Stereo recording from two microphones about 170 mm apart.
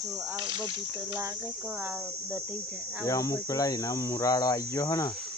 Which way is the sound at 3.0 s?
20° left (ahead or behind).